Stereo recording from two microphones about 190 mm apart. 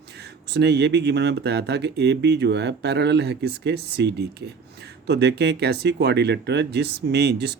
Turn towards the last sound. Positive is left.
turn(degrees=-60)  # may be behind; listen again after turning